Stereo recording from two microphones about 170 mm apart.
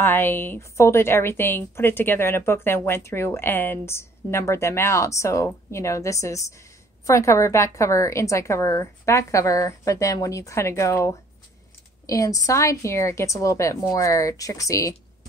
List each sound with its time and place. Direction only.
0.0 s a woman's voice: 15° left (ahead or behind)